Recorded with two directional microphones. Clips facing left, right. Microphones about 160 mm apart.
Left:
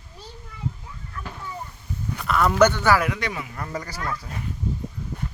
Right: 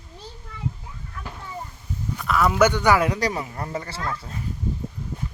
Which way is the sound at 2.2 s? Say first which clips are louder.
Left 1 dB; centre (ahead or behind).